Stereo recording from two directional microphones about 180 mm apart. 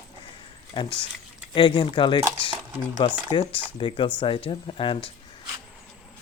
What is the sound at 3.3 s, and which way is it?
Speech, 30° left (ahead or behind).